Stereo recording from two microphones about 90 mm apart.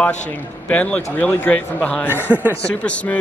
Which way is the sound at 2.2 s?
20° right (ahead or behind).